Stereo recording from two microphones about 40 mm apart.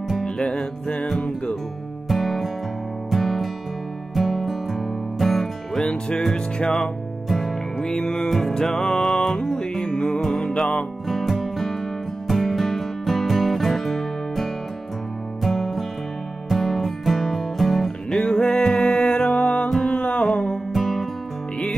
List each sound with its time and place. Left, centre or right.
2.0 s music: centre
5.9 s music: left
6.7 s music: centre
7.8 s music: centre
8.3 s music: centre
11.1 s music: centre
18.1 s music: centre
19.0 s music: left
19.4 s music: left
19.8 s music: left
20.7 s music: centre